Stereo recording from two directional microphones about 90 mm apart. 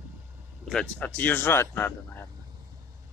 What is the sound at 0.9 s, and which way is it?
Speech, 15° left (ahead or behind).